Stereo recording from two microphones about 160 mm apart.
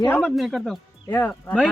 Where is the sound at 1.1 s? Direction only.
10° left (ahead or behind).